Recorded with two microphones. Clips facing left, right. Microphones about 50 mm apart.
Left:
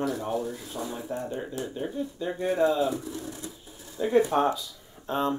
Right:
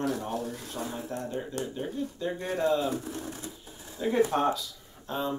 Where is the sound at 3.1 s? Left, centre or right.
Right.